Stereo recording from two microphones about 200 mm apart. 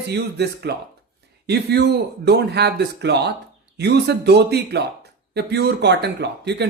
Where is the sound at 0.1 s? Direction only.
55° right (ahead or behind).